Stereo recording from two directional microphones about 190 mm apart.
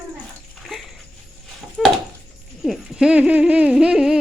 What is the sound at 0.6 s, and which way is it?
Dog, centre (ahead or behind).